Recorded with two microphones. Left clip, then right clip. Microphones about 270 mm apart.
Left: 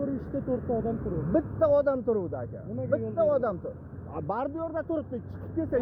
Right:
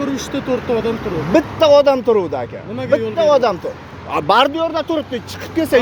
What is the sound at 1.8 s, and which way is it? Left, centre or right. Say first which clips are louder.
Speech: right 13 dB; right.